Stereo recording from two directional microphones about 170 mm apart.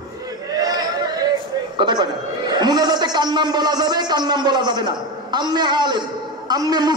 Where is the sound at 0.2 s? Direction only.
20° right (ahead or behind).